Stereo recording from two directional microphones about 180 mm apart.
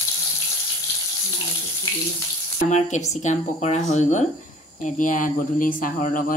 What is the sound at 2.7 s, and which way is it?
Speech, 40° left (ahead or behind).